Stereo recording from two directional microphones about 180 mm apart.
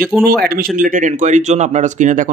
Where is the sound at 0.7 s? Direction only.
50° right (ahead or behind).